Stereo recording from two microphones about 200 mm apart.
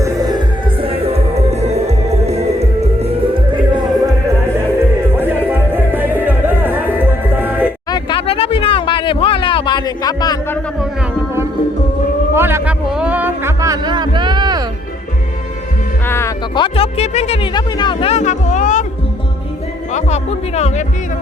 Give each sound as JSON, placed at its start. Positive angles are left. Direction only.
{"t": 0.0, "sound": "music", "side_deg": -20}
{"t": 0.8, "sound": "music", "side_deg": -30}
{"t": 5.1, "sound": "music", "side_deg": -10}
{"t": 7.9, "sound": "a sound", "side_deg": 25}
{"t": 12.3, "sound": "music", "side_deg": -10}
{"t": 16.0, "sound": "music", "side_deg": 15}
{"t": 16.6, "sound": "music", "side_deg": 30}
{"t": 19.9, "sound": "music", "side_deg": 35}